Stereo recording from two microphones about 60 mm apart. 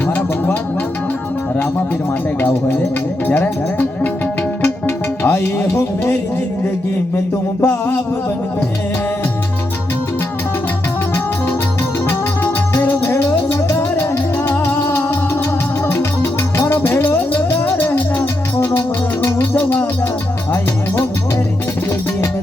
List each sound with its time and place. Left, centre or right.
0.1 s music: left
3.2 s music: left
7.6 s music: left
12.8 s music: left
17.1 s music: left